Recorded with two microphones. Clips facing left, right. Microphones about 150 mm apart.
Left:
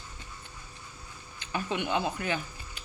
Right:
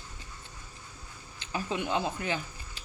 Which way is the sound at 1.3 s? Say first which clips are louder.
Left 1 dB; 30° right (ahead or behind).